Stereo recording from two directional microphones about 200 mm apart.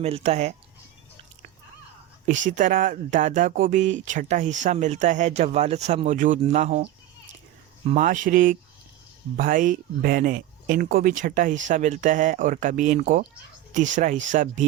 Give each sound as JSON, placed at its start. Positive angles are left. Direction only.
{"t": 0.0, "sound": "speech", "side_deg": -30}
{"t": 2.5, "sound": "speech", "side_deg": -40}
{"t": 7.9, "sound": "speech", "side_deg": -40}